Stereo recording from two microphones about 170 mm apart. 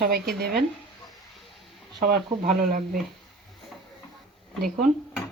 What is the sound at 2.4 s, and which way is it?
Speech, 55° right (ahead or behind).